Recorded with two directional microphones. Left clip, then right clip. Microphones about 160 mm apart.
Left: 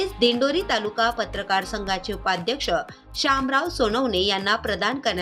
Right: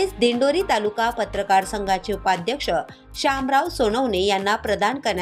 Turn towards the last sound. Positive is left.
turn(degrees=-15)  # may be behind; listen again after turning